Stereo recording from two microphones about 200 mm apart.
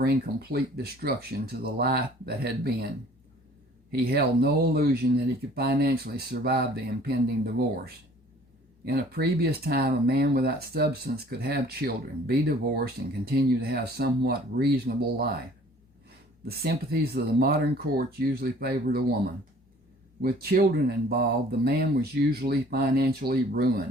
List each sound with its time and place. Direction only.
0.0 s speech: 50° right (ahead or behind)
4.0 s speech: 50° right (ahead or behind)
8.8 s speech: 55° right (ahead or behind)
16.5 s speech: 50° right (ahead or behind)